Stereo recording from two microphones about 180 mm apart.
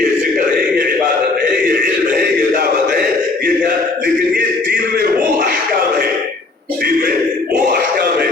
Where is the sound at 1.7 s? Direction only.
50° right (ahead or behind).